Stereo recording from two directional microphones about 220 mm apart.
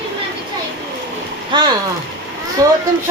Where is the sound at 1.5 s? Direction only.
20° right (ahead or behind).